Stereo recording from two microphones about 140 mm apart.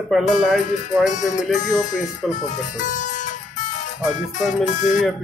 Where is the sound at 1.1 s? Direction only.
60° left (ahead or behind).